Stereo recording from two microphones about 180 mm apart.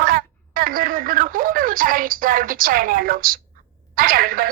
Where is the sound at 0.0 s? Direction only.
55° right (ahead or behind).